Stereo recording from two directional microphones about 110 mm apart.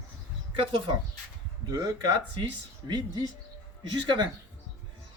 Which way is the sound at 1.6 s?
35° right (ahead or behind).